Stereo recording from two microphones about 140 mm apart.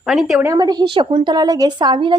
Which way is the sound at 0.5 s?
30° right (ahead or behind).